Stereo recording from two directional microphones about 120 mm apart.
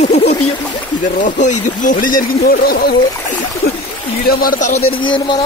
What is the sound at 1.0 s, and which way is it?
Speech, 90° left.